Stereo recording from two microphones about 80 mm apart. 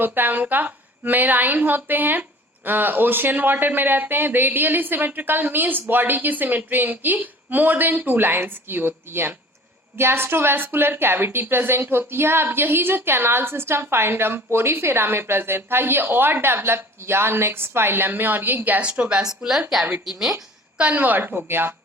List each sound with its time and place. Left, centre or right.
0.0 s a woman's voice: right; by 20.3 s centre
20.7 s a woman's voice: centre